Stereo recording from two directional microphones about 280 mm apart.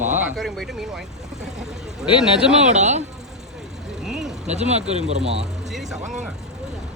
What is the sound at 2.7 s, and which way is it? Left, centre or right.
Speech, right.